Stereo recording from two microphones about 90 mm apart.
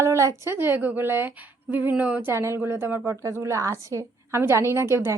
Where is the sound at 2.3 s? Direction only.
30° right (ahead or behind).